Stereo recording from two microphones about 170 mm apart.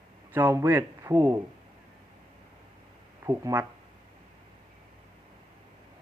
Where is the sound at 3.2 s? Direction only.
15° right (ahead or behind).